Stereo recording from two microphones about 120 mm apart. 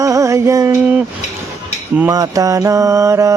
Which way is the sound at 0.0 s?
25° right (ahead or behind).